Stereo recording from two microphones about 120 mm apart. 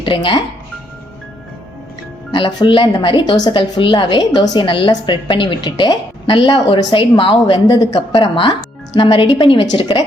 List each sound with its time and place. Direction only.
0.0 s speech: 45° left (ahead or behind)
2.3 s a woman's voice: 45° left (ahead or behind)